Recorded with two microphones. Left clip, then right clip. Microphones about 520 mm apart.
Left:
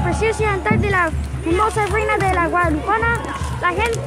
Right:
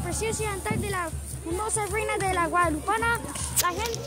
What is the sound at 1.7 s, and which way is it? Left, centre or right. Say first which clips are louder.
Speech: left 10 dB; right.